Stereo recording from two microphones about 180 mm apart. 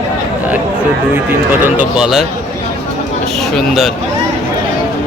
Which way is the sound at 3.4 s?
Centre (ahead or behind).